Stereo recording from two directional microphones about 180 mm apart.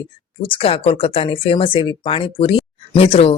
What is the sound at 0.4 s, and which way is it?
Speech, 30° left (ahead or behind).